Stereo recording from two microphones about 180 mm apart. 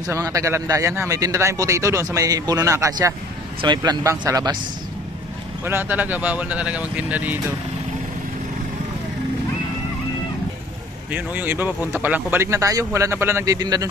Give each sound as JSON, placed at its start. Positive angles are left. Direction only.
{"t": 0.0, "sound": "a man's voice", "side_deg": -15}
{"t": 5.7, "sound": "a man's voice", "side_deg": -10}
{"t": 11.1, "sound": "a man's voice", "side_deg": -10}